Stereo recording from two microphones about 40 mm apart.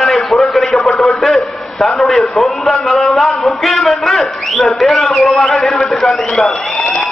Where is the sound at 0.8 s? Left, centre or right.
Left.